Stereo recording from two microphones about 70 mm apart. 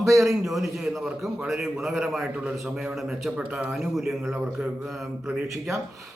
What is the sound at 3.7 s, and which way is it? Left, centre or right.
Speech, centre.